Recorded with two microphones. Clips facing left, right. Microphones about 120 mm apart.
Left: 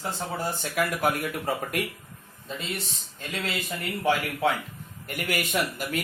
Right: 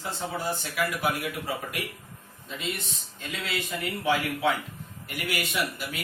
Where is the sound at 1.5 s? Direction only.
45° left (ahead or behind).